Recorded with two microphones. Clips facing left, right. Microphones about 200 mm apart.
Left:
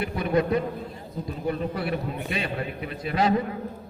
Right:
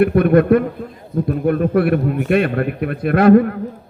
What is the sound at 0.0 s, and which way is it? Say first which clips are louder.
A man's voice: right 12 dB; 60° right (ahead or behind).